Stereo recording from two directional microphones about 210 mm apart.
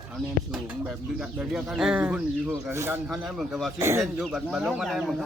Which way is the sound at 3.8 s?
10° right (ahead or behind).